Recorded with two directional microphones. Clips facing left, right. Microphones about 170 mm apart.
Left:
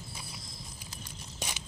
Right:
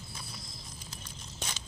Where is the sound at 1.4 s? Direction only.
15° left (ahead or behind).